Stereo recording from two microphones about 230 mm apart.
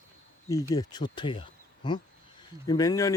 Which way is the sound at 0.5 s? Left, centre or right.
Centre.